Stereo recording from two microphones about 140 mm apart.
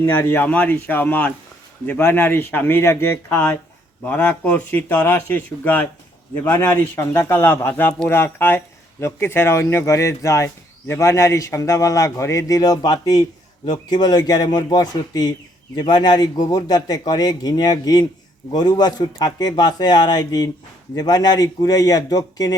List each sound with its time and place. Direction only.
0.0 s speech: 15° left (ahead or behind)